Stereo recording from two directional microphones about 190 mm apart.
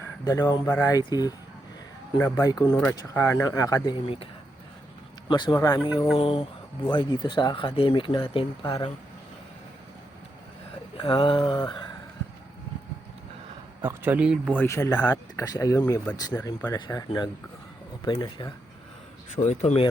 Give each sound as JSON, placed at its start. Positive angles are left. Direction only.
{"t": 0.3, "sound": "speech", "side_deg": 20}
{"t": 5.3, "sound": "speech", "side_deg": 25}
{"t": 6.1, "sound": "speech", "side_deg": 30}
{"t": 10.9, "sound": "speech", "side_deg": 25}
{"t": 13.8, "sound": "speech", "side_deg": -10}
{"t": 14.6, "sound": "speech", "side_deg": 15}
{"t": 15.5, "sound": "speech", "side_deg": 20}
{"t": 16.7, "sound": "speech", "side_deg": 25}
{"t": 19.4, "sound": "speech", "side_deg": 35}